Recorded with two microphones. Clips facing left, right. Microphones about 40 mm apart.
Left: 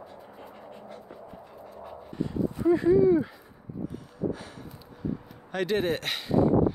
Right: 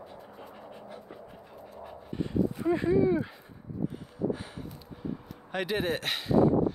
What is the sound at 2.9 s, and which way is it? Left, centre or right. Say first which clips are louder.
Speech: left 2 dB; right.